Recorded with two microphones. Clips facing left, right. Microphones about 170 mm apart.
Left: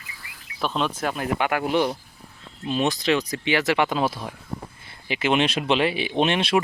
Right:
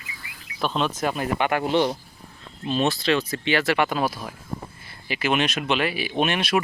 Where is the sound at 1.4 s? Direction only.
10° left (ahead or behind).